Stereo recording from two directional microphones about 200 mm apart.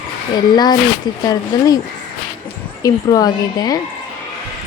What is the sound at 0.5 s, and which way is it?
A woman's voice, 20° left (ahead or behind).